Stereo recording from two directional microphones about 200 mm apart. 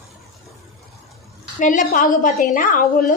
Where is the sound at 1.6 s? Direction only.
40° left (ahead or behind).